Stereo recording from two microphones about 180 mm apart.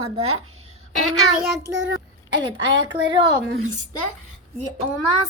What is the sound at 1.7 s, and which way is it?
Speech, 90° right.